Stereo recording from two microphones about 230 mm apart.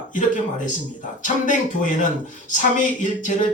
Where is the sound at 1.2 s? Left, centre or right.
Left.